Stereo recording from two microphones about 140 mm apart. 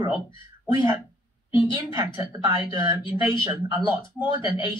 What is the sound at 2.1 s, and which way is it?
Speech, 20° right (ahead or behind).